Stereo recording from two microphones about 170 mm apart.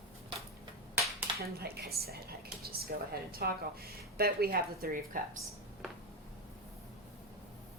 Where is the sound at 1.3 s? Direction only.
70° right (ahead or behind).